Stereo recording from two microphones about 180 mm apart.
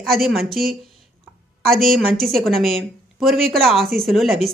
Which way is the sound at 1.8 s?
55° right (ahead or behind).